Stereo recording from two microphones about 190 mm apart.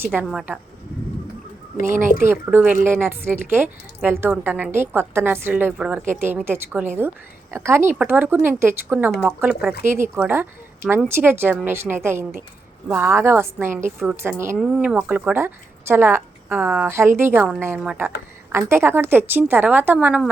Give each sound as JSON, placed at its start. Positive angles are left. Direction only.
{"t": 0.0, "sound": "a woman's voice", "side_deg": -10}
{"t": 1.9, "sound": "speech", "side_deg": -40}
{"t": 2.2, "sound": "a woman's voice", "side_deg": -10}